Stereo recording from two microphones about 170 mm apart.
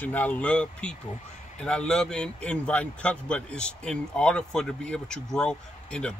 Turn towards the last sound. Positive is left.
turn(degrees=5)  # may be behind; listen again after turning